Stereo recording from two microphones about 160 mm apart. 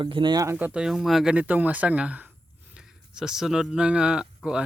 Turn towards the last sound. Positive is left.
turn(degrees=-5)  # may be behind; listen again after turning